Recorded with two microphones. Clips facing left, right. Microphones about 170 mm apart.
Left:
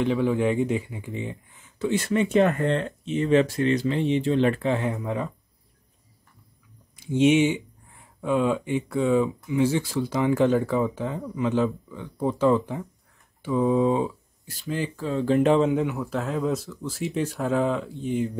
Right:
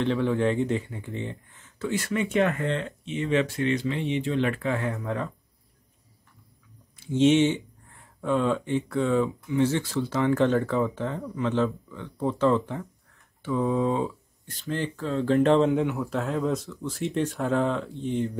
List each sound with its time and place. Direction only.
0.0 s speech: 10° left (ahead or behind)
1.9 s speech: 25° left (ahead or behind)
7.0 s speech: 15° left (ahead or behind)